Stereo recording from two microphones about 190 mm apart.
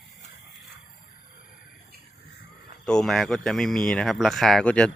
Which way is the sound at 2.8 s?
5° left (ahead or behind).